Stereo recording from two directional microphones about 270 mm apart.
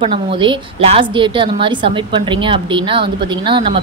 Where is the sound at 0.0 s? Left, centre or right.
Centre.